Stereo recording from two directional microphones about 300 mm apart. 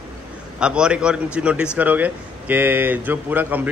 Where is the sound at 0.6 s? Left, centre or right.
Centre.